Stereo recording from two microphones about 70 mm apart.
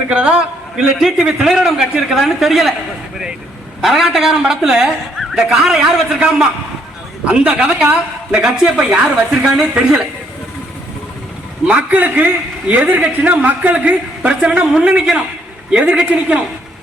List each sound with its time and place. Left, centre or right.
0.1 s a man's voice: centre
3.8 s a man's voice: centre
11.7 s a man's voice: right